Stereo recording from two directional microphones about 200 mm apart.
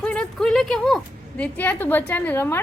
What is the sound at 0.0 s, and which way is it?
A woman's voice, 5° left (ahead or behind).